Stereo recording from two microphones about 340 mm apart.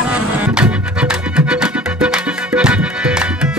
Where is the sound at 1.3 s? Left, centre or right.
Centre.